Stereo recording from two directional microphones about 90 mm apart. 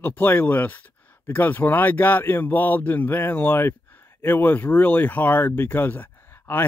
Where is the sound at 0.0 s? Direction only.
20° left (ahead or behind).